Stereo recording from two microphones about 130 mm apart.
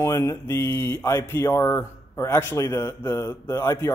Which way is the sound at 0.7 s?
40° right (ahead or behind).